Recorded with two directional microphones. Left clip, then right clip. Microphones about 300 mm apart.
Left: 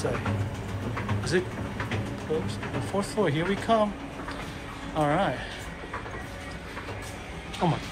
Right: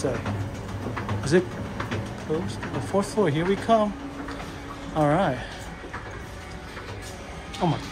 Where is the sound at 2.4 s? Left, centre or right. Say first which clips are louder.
Right 1 dB; centre.